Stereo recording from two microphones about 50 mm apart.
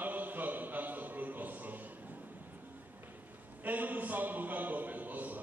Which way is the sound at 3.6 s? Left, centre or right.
Right.